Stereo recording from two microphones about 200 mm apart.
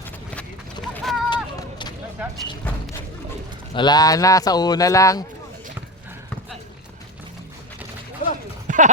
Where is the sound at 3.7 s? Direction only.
20° left (ahead or behind).